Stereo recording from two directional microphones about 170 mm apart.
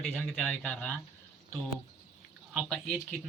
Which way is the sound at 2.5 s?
5° left (ahead or behind).